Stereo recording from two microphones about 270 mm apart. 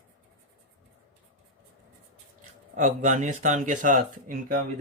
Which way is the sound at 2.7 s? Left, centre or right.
Right.